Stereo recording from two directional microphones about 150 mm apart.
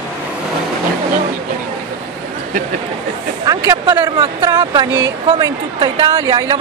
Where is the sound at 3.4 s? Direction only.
25° right (ahead or behind).